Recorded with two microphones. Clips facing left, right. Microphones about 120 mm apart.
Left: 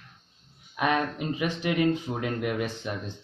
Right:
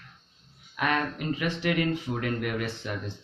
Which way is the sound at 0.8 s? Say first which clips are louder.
Left 2 dB; 20° left (ahead or behind).